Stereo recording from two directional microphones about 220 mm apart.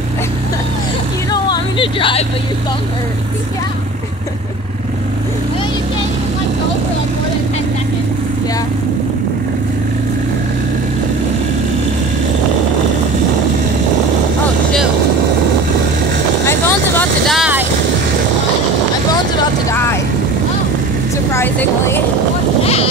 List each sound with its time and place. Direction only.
1.3 s vehicle: 20° left (ahead or behind)
16.4 s vehicle: 10° left (ahead or behind); by 17.6 s 5° right (ahead or behind)
19.7 s vehicle: 10° left (ahead or behind)
21.3 s vehicle: 10° left (ahead or behind)
22.6 s boat: 25° left (ahead or behind)